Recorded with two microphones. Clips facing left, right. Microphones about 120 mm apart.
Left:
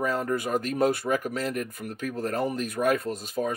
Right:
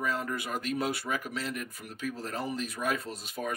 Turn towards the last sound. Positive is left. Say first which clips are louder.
# left 7 dB
turn(degrees=40)  # may be behind; listen again after turning